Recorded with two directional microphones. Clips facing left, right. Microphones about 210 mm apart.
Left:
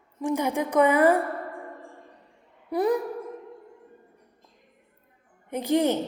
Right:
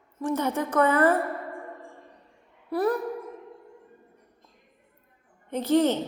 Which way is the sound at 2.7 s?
15° left (ahead or behind).